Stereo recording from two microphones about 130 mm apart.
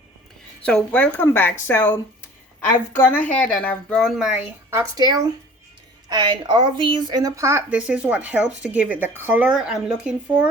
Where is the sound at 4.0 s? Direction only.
5° right (ahead or behind).